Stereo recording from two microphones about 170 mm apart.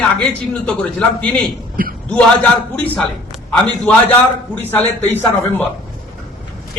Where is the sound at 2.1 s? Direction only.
10° left (ahead or behind).